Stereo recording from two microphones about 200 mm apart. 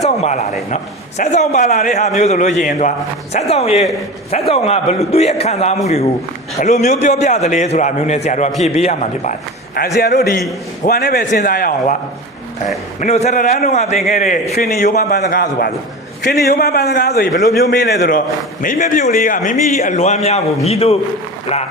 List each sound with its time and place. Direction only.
0.0 s a sound: 35° left (ahead or behind)
0.7 s a man's voice: 35° left (ahead or behind)
10.0 s a man's voice: 55° left (ahead or behind)
13.0 s a man's voice: 35° left (ahead or behind); by 18.2 s 55° left (ahead or behind)
18.6 s a man's voice: 40° left (ahead or behind)